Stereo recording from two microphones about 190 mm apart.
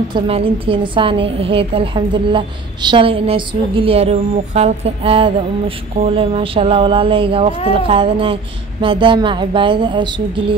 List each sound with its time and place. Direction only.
0.1 s a woman's voice: 30° right (ahead or behind)